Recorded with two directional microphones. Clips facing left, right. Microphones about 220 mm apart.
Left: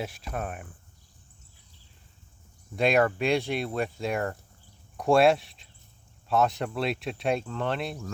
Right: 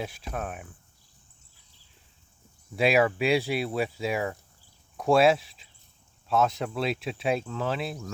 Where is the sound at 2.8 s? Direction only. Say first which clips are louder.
Even; 5° right (ahead or behind).